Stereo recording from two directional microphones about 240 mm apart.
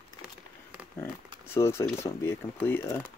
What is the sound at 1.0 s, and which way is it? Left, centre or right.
Speech, centre.